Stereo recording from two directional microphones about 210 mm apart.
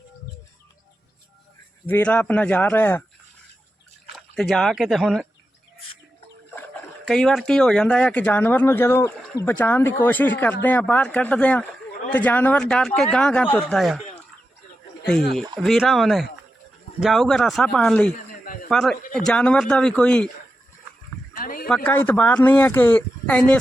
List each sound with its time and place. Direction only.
1.9 s speech: 5° left (ahead or behind)
4.1 s speech: centre (ahead or behind)
7.1 s speech: 5° left (ahead or behind)
15.6 s speech: centre (ahead or behind)
21.3 s a sound: 40° left (ahead or behind)
21.8 s speech: 10° left (ahead or behind)